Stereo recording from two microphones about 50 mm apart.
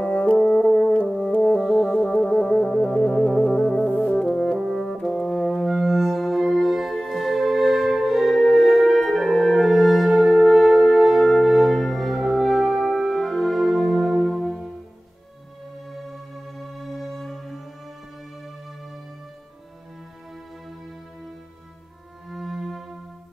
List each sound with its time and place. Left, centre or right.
0.0 s french horn: left
1.6 s music: centre
4.3 s french horn: centre
4.6 s brass instrument: centre
15.9 s music: centre
22.3 s music: centre